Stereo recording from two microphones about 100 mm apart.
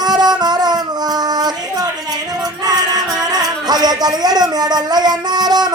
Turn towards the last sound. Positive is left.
turn(degrees=-45)  # may be behind; listen again after turning